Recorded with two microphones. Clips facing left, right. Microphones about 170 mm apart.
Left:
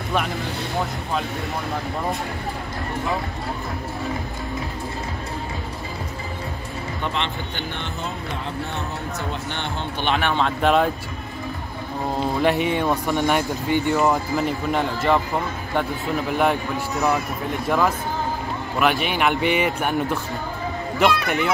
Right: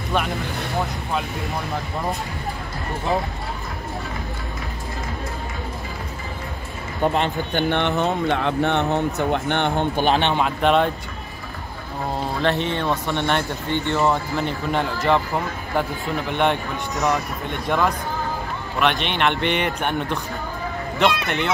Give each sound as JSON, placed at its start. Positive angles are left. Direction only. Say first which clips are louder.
{"t": 0.1, "sound": "a man's voice", "louder": "right 1 dB", "side_deg": 0}
{"t": 7.0, "sound": "speech", "louder": "right 8 dB", "side_deg": -45}
{"t": 7.7, "sound": "speech", "louder": "right 10 dB", "side_deg": -65}
{"t": 10.0, "sound": "speech", "louder": "right 1 dB", "side_deg": -30}
{"t": 10.6, "sound": "a man's voice", "louder": "even", "side_deg": 0}
{"t": 12.4, "sound": "a man's voice", "louder": "left 2 dB", "side_deg": 10}